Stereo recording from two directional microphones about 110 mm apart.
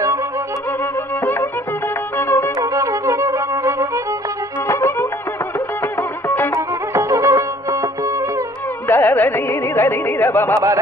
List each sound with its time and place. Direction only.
1.2 s music: 25° left (ahead or behind)
2.6 s music: 30° right (ahead or behind)
4.6 s music: 25° left (ahead or behind)
6.9 s music: 30° right (ahead or behind)
8.8 s carnatic music: 20° left (ahead or behind)